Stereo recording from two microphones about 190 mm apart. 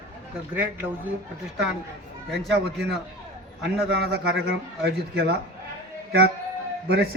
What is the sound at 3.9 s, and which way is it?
A man's voice, 60° right (ahead or behind).